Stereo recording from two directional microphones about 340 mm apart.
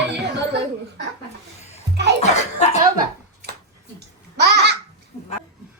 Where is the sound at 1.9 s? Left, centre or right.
Right.